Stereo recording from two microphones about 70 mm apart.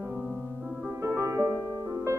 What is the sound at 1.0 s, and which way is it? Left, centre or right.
Music, right.